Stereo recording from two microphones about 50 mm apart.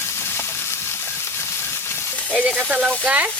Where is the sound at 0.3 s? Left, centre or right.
Left.